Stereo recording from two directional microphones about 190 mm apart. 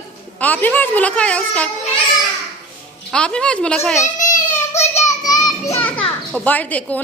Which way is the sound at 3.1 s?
5° left (ahead or behind).